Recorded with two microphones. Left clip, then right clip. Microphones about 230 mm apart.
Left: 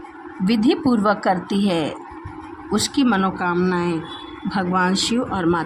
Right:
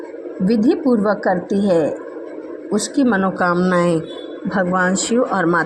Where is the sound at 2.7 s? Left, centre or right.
Centre.